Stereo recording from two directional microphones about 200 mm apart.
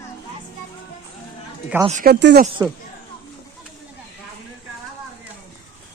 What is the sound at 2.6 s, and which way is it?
Speech, 15° right (ahead or behind).